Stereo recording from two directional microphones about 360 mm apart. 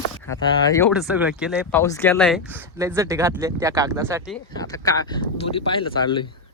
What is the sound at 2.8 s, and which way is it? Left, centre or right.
Speech, centre.